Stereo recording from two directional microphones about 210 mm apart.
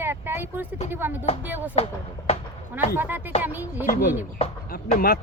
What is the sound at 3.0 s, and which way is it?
Speech, 10° right (ahead or behind).